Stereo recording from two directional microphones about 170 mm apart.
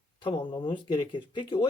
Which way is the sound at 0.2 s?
30° left (ahead or behind).